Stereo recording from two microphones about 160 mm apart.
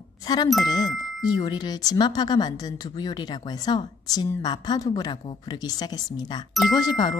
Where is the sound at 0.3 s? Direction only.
25° left (ahead or behind).